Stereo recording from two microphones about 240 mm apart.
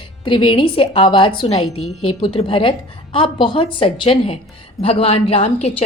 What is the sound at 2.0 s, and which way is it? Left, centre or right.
Speech, left.